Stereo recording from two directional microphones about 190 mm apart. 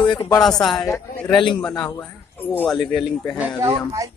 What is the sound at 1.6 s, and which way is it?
Speech, 5° left (ahead or behind).